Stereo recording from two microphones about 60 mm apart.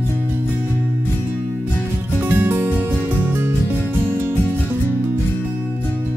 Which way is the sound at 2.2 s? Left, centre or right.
Right.